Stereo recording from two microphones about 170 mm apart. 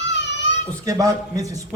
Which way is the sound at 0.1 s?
90° left.